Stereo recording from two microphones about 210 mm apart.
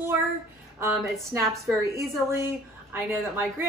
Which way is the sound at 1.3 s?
10° right (ahead or behind).